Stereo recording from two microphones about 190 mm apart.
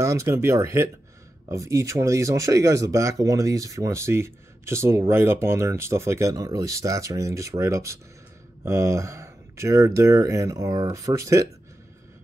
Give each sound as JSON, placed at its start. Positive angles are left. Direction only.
{"t": 0.0, "sound": "speech", "side_deg": -15}